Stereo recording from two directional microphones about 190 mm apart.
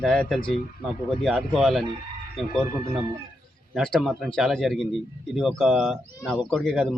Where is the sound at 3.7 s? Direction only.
Centre (ahead or behind).